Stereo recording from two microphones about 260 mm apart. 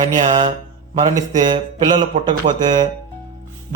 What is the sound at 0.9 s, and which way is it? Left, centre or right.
Speech, centre.